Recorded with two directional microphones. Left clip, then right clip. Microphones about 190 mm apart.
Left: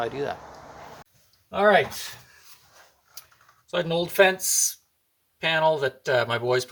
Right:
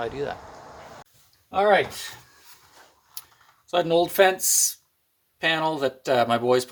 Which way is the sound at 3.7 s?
30° right (ahead or behind).